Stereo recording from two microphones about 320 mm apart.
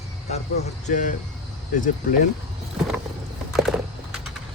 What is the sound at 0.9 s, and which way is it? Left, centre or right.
Speech, left.